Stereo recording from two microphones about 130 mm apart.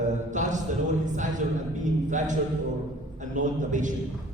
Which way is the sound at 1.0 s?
70° right (ahead or behind).